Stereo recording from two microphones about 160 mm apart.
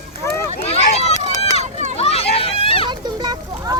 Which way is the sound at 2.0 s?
40° left (ahead or behind).